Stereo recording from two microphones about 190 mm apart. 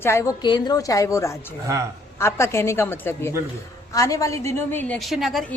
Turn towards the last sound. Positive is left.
turn(degrees=0)  # may be behind; listen again after turning